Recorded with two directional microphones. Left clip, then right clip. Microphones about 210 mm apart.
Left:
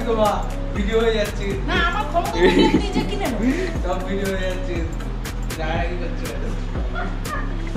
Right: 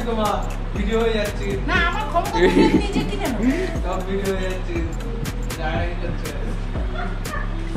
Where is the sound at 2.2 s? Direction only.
5° right (ahead or behind).